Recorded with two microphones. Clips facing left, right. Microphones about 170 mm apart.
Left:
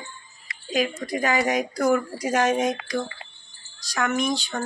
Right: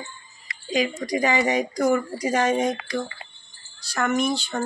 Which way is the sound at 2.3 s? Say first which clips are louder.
Even; 5° left (ahead or behind).